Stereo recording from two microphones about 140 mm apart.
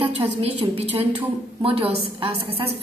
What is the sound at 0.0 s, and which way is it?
A woman's voice, 40° right (ahead or behind).